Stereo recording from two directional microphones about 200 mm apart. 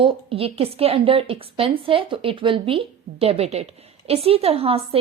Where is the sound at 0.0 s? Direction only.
30° right (ahead or behind).